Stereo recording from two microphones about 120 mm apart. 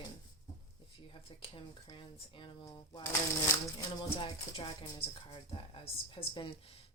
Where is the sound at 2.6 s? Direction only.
35° left (ahead or behind).